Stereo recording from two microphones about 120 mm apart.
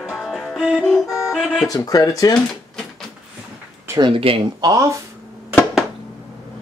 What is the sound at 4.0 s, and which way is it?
Speech, 50° right (ahead or behind).